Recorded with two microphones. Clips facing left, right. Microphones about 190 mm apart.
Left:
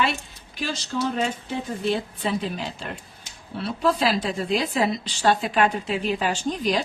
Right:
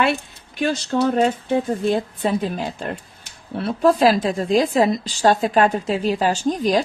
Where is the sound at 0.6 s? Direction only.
60° right (ahead or behind).